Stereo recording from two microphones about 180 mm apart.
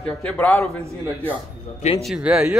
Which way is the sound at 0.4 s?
10° left (ahead or behind).